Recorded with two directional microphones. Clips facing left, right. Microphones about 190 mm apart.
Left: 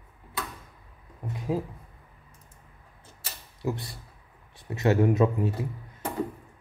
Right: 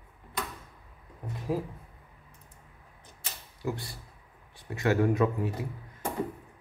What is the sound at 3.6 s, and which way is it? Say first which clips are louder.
Speech: left 3 dB; 20° left (ahead or behind).